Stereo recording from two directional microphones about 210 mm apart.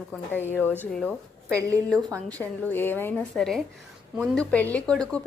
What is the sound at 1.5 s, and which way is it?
Speech, 15° right (ahead or behind).